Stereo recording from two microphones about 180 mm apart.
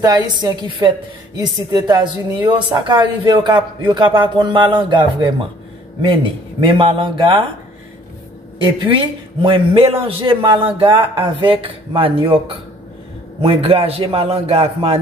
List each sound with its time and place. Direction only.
0.0 s a woman's voice: 20° right (ahead or behind)
8.6 s a woman's voice: 25° right (ahead or behind)
13.4 s a man's voice: 30° right (ahead or behind)